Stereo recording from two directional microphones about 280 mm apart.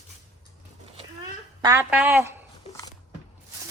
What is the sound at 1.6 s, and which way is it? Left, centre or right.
Speech, centre.